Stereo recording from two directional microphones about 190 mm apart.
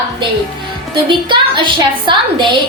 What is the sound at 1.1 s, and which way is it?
A woman's voice, 25° right (ahead or behind).